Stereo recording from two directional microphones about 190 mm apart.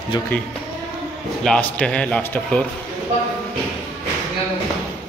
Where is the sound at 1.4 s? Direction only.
5° left (ahead or behind).